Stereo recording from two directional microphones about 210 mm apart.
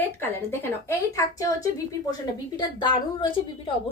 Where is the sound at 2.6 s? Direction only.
20° left (ahead or behind).